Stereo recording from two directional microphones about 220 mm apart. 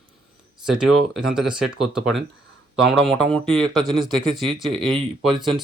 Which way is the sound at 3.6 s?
20° right (ahead or behind).